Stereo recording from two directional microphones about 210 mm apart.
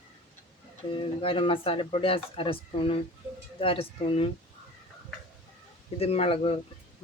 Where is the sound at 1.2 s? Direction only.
25° left (ahead or behind).